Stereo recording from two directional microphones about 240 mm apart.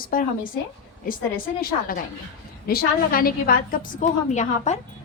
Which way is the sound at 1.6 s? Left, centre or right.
Left.